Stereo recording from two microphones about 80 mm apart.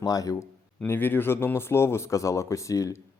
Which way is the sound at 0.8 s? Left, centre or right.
Left.